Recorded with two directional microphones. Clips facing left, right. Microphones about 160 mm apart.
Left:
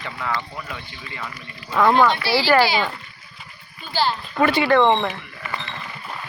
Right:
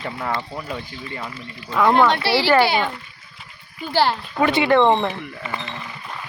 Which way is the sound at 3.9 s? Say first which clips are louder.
Right 4 dB; 75° right (ahead or behind).